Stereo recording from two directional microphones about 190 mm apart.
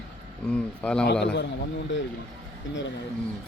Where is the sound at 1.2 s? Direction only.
65° left (ahead or behind).